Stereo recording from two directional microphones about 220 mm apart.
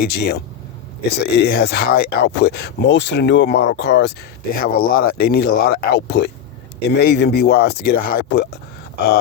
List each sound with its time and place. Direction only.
0.0 s speech: 45° left (ahead or behind)